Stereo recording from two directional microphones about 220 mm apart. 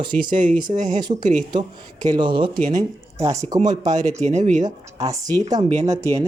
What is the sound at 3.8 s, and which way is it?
Speech, 30° right (ahead or behind).